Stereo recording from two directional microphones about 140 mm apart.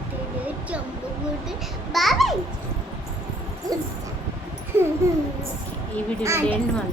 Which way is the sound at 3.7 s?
25° right (ahead or behind).